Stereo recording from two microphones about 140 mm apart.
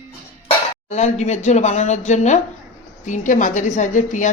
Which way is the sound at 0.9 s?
55° left (ahead or behind).